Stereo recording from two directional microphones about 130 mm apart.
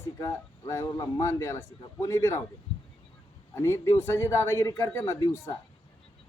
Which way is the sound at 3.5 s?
20° left (ahead or behind).